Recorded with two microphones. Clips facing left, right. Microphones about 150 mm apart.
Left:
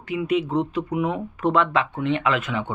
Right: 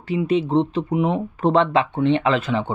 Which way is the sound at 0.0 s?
30° right (ahead or behind).